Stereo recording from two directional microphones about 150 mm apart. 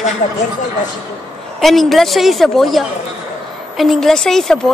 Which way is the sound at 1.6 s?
Centre (ahead or behind).